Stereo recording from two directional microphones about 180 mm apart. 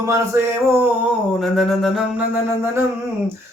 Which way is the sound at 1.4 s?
Centre (ahead or behind).